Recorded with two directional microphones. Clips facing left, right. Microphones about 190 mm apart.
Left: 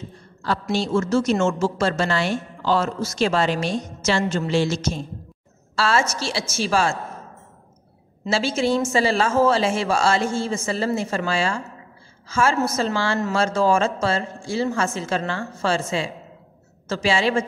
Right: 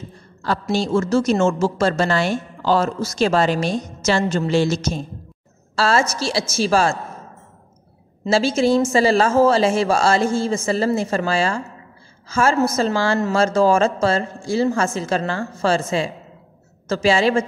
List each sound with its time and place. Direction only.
0.4 s a woman's voice: 45° right (ahead or behind)
8.3 s a woman's voice: 40° right (ahead or behind)